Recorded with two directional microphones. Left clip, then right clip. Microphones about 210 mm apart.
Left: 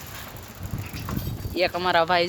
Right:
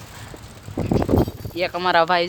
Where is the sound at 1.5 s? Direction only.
5° right (ahead or behind).